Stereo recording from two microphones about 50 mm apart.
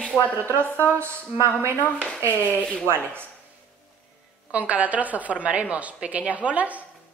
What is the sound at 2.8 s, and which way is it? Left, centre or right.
Speech, right.